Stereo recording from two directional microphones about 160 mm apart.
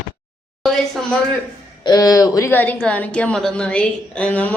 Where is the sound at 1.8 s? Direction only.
25° left (ahead or behind).